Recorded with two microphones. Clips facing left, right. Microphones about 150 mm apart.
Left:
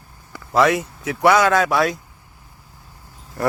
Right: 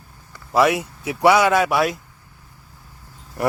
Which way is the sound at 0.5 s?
10° right (ahead or behind).